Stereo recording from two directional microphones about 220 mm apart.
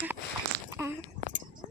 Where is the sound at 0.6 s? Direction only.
15° right (ahead or behind).